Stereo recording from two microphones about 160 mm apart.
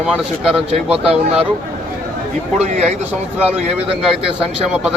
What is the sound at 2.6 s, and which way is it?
Speech, 45° right (ahead or behind).